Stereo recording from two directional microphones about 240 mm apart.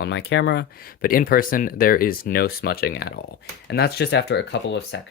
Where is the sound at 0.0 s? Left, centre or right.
Left.